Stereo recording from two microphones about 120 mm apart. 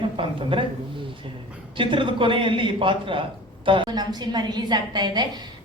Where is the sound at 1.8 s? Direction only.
45° right (ahead or behind).